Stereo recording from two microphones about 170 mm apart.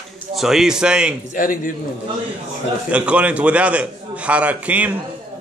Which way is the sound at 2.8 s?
10° right (ahead or behind).